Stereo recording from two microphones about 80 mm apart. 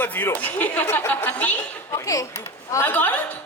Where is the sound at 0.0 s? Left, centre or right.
Left.